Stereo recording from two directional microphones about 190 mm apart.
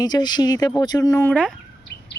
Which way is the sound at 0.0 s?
20° left (ahead or behind).